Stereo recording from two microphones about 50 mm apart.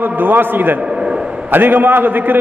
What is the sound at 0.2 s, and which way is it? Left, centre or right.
A man's voice, right.